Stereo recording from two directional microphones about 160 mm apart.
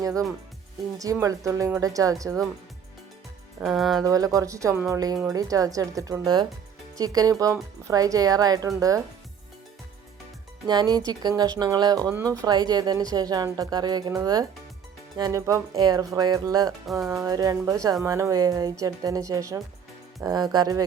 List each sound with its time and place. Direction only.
0.0 s speech: 20° right (ahead or behind)
3.6 s speech: centre (ahead or behind)
4.0 s speech: 20° right (ahead or behind)
10.7 s speech: 25° right (ahead or behind)
16.8 s speech: centre (ahead or behind)
17.2 s speech: 25° right (ahead or behind)